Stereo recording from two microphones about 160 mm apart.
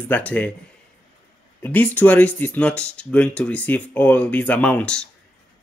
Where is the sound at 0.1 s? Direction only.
10° left (ahead or behind).